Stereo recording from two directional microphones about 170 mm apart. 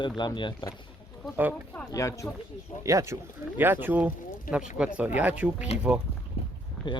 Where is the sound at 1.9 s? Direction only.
20° left (ahead or behind).